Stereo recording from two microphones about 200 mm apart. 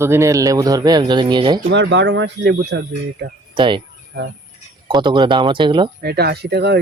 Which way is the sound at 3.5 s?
25° right (ahead or behind).